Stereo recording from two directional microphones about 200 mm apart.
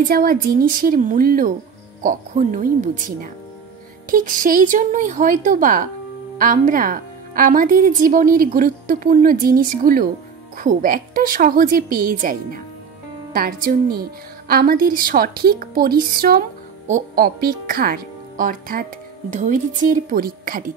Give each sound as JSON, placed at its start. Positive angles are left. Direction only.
{"t": 0.1, "sound": "speech", "side_deg": -45}